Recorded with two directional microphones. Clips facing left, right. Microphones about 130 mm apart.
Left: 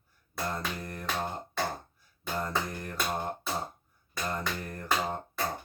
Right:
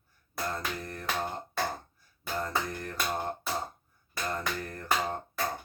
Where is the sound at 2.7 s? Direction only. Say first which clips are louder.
Right 1 dB; 15° left (ahead or behind).